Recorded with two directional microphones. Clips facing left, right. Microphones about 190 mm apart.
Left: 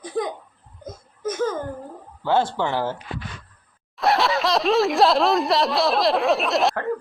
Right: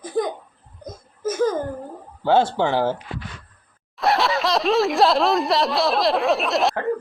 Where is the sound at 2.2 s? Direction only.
25° right (ahead or behind).